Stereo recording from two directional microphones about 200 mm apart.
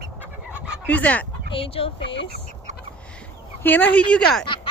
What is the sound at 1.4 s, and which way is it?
Speech, 25° left (ahead or behind).